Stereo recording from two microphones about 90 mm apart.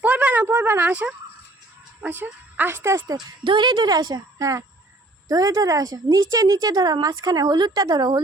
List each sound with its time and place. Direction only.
0.0 s a sound: 15° right (ahead or behind)
2.0 s speech: 20° right (ahead or behind)
3.4 s a woman's voice: 60° right (ahead or behind)